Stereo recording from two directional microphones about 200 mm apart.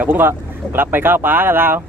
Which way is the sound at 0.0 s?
10° right (ahead or behind).